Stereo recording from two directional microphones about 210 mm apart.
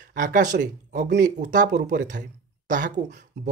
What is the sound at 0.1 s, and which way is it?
Speech, 40° right (ahead or behind).